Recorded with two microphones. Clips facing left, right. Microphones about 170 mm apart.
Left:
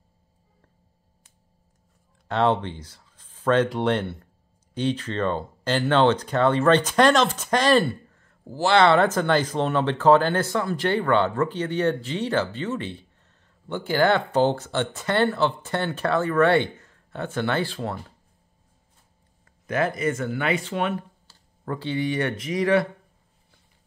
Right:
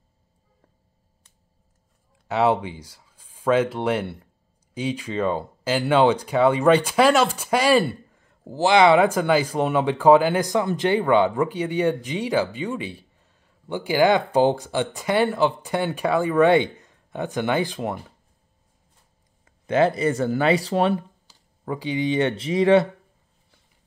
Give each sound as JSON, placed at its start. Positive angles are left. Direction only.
{"t": 2.2, "sound": "speech", "side_deg": -5}
{"t": 19.6, "sound": "speech", "side_deg": -25}
{"t": 21.3, "sound": "speech", "side_deg": -15}